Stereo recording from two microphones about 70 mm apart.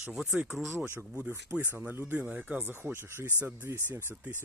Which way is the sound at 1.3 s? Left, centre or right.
Right.